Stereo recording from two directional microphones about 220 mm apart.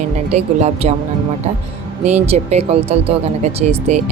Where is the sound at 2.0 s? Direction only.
30° right (ahead or behind).